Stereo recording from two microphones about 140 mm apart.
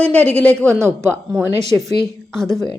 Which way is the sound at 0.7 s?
20° right (ahead or behind).